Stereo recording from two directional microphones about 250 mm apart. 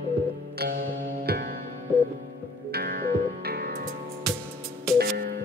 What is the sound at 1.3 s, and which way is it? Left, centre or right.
Music, right.